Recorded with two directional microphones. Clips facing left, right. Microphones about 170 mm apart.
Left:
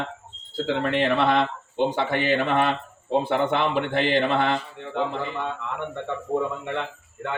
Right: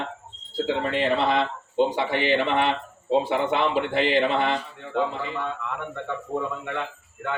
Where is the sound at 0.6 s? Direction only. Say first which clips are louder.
Left 2 dB; 60° left (ahead or behind).